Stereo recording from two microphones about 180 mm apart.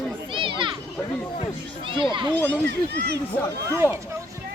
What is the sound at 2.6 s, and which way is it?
Speech, 70° right (ahead or behind).